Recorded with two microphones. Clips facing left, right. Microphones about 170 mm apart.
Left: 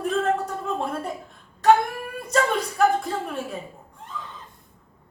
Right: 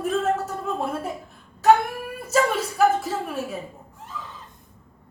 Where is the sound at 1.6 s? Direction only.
5° right (ahead or behind).